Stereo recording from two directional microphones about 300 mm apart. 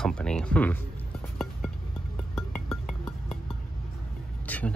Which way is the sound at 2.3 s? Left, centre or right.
Centre.